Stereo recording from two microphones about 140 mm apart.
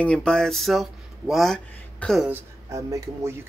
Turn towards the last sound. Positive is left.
turn(degrees=-20)  # may be behind; listen again after turning